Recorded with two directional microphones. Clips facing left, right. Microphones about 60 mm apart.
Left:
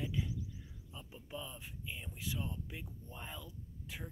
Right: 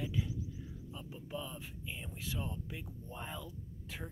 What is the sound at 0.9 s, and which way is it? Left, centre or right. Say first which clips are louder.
Speech: right 3 dB; centre.